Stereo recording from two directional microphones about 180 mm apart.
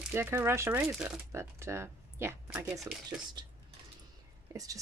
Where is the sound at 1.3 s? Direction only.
15° right (ahead or behind).